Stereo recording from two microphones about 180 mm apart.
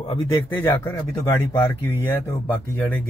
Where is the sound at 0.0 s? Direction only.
25° left (ahead or behind).